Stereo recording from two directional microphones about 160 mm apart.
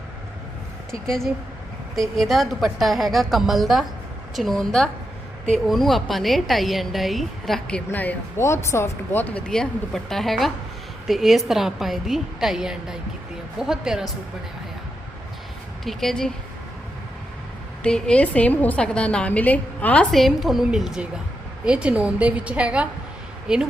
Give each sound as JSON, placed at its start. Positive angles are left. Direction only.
{"t": 0.9, "sound": "a woman's voice", "side_deg": 5}
{"t": 15.8, "sound": "a woman's voice", "side_deg": 0}
{"t": 17.8, "sound": "a woman's voice", "side_deg": 5}